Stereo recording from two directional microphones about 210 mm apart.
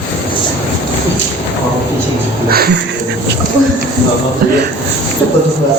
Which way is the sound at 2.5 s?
45° right (ahead or behind).